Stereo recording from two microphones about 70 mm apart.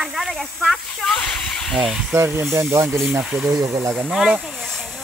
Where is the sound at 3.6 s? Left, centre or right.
Right.